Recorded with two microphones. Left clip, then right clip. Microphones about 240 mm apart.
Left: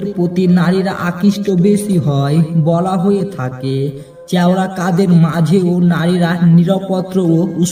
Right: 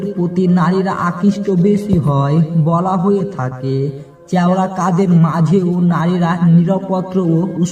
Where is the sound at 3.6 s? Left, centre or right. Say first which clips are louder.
Left 1 dB; right.